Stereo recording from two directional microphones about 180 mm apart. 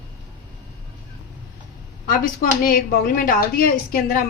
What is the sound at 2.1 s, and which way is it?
Speech, 55° left (ahead or behind).